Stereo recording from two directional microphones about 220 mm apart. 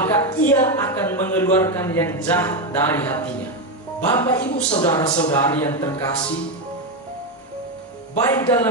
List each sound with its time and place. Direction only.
0.3 s a woman's voice: 15° left (ahead or behind)
4.6 s a woman's voice: 25° left (ahead or behind)
8.2 s a woman's voice: 15° left (ahead or behind)